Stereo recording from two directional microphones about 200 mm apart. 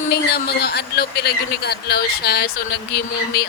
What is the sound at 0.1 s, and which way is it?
A man's voice, 50° left (ahead or behind).